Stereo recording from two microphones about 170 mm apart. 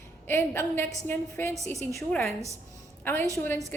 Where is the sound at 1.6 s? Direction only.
40° right (ahead or behind).